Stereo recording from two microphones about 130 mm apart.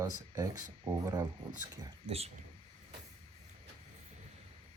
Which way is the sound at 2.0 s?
50° right (ahead or behind).